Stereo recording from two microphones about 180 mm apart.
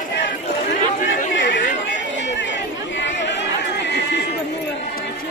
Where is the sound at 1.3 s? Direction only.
90° left.